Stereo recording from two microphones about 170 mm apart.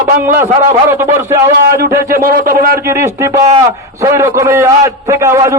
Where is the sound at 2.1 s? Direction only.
60° right (ahead or behind).